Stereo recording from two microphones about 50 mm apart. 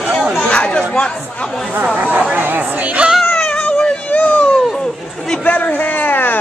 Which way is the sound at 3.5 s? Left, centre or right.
Left.